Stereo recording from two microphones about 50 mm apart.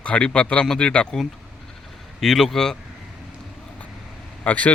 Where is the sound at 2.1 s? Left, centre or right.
Centre.